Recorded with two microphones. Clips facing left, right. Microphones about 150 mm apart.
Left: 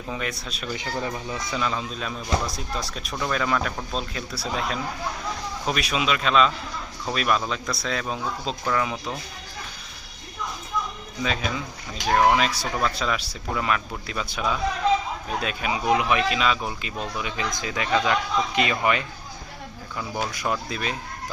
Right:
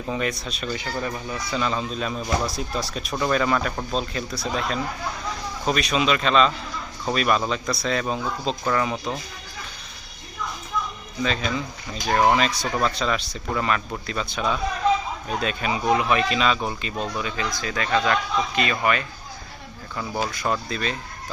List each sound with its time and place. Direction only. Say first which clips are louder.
0.1 s speech: right 4 dB; centre (ahead or behind)
0.8 s speech: even; 20° left (ahead or behind)
1.5 s speech: right 3 dB; centre (ahead or behind)
11.2 s speech: right 2 dB; 5° left (ahead or behind)
17.3 s speech: right 1 dB; 15° left (ahead or behind)
20.0 s speech: right 2 dB; 5° right (ahead or behind)
20.3 s speech: right 2 dB; 10° left (ahead or behind)